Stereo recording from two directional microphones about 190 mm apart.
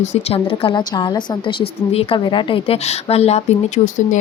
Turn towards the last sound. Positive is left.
turn(degrees=35)  # may be behind; listen again after turning